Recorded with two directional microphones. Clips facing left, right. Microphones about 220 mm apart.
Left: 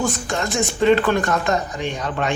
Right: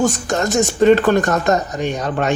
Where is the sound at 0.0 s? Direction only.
45° right (ahead or behind).